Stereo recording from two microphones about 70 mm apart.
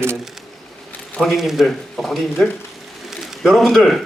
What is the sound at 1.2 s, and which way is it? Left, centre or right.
A man's voice, centre.